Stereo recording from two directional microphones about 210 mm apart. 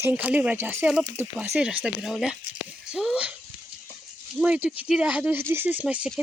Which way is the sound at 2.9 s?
5° right (ahead or behind).